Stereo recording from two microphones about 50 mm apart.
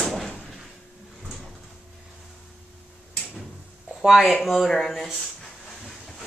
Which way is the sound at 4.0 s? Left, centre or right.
Centre.